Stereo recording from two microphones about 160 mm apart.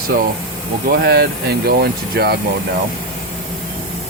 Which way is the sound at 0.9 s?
80° right.